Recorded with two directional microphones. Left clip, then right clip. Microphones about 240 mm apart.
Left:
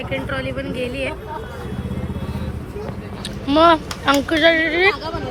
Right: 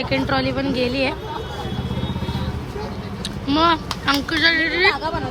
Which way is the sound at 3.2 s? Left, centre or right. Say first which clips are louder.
Left 4 dB; centre.